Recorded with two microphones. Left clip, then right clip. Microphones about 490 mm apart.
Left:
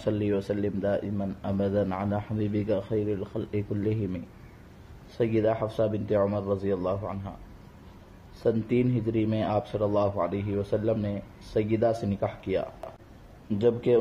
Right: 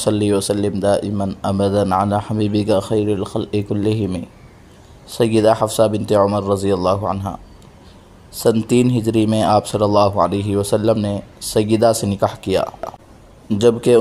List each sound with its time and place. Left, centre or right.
0.0 s speech: left
8.5 s speech: left